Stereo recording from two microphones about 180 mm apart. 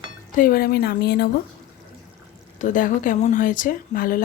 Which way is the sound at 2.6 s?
45° left (ahead or behind).